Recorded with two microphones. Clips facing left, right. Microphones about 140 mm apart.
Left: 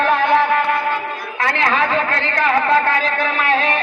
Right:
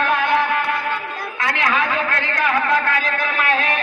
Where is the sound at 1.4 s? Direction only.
30° left (ahead or behind).